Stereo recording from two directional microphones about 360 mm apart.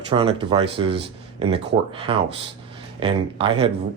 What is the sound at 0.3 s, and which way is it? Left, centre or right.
Speech, centre.